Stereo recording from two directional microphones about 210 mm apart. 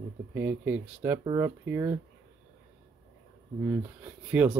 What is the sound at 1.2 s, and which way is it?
Speech, 20° right (ahead or behind).